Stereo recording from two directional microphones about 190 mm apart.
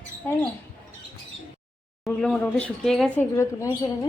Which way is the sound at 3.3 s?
15° left (ahead or behind).